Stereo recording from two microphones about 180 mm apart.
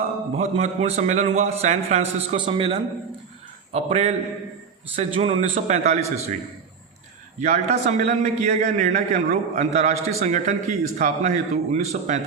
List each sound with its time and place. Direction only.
0.3 s a man's voice: 35° right (ahead or behind)
7.3 s a man's voice: 45° right (ahead or behind)